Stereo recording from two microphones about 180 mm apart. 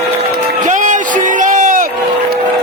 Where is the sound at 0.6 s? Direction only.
45° right (ahead or behind).